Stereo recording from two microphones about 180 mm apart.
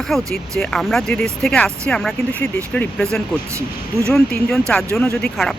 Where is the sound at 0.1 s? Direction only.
5° left (ahead or behind).